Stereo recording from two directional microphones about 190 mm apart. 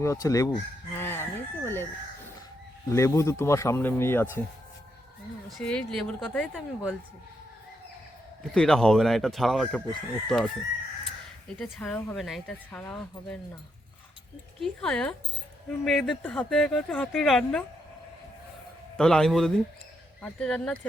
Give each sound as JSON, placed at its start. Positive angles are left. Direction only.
{"t": 0.0, "sound": "speech", "side_deg": 15}
{"t": 0.9, "sound": "chicken", "side_deg": 10}
{"t": 2.9, "sound": "speech", "side_deg": 15}
{"t": 5.5, "sound": "speech", "side_deg": 0}
{"t": 8.5, "sound": "speech", "side_deg": 5}
{"t": 11.6, "sound": "speech", "side_deg": 5}
{"t": 14.6, "sound": "speech", "side_deg": 5}
{"t": 18.9, "sound": "speech", "side_deg": 5}